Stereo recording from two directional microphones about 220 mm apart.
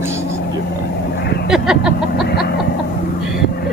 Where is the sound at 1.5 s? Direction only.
Centre (ahead or behind).